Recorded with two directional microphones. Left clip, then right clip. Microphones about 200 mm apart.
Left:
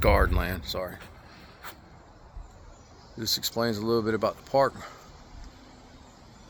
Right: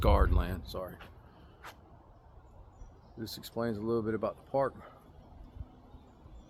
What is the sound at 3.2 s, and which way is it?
Speech, 40° left (ahead or behind).